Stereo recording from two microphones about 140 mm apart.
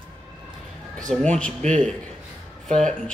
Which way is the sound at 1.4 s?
10° left (ahead or behind).